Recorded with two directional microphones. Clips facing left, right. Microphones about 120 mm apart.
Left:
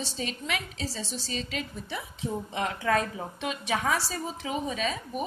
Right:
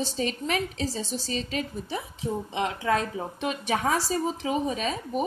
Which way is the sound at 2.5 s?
25° right (ahead or behind).